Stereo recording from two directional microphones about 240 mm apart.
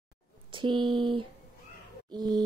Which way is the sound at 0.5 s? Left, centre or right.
Centre.